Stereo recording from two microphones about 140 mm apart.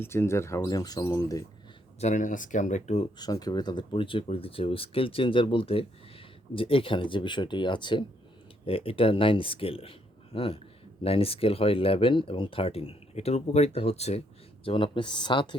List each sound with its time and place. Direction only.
0.0 s speech: 15° left (ahead or behind)
2.0 s speech: 60° left (ahead or behind)
3.2 s speech: 30° left (ahead or behind); by 14.2 s 50° left (ahead or behind)
14.6 s speech: 40° left (ahead or behind)